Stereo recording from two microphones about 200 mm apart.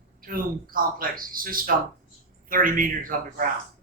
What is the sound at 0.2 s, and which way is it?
Speech, 45° right (ahead or behind).